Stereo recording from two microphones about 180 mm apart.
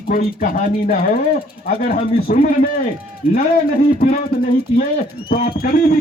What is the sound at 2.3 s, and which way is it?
Speech, 45° left (ahead or behind).